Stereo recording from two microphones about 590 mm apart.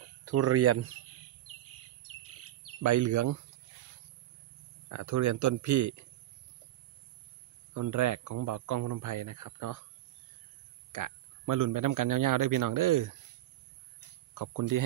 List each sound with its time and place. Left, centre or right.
0.2 s speech: right
2.8 s speech: right
4.8 s speech: right
7.7 s speech: right
10.9 s a man's voice: right
14.3 s speech: right